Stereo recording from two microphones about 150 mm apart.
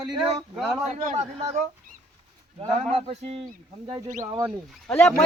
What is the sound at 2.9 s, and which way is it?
Speech, 50° right (ahead or behind).